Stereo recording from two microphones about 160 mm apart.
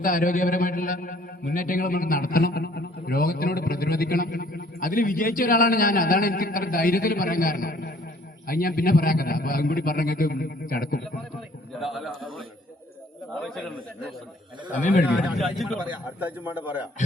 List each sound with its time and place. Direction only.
0.0 s a man's voice: 60° left (ahead or behind)
11.8 s a man's voice: centre (ahead or behind)
13.4 s a man's voice: 5° left (ahead or behind)
15.4 s a man's voice: centre (ahead or behind)
16.2 s a man's voice: 10° right (ahead or behind)